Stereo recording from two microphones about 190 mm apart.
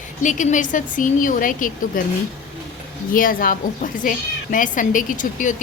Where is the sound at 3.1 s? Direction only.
45° left (ahead or behind).